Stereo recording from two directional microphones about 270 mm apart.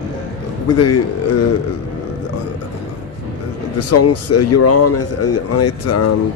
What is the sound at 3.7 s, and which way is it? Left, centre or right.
Speech, left.